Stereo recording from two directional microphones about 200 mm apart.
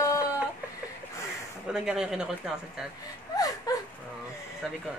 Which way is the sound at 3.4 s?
20° left (ahead or behind).